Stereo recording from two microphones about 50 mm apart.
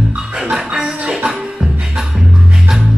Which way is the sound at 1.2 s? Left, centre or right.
Right.